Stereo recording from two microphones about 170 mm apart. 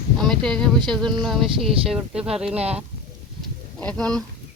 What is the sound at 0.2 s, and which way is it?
Speech, centre (ahead or behind).